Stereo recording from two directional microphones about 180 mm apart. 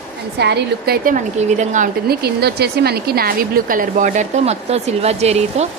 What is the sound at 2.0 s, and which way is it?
Speech, 60° right (ahead or behind).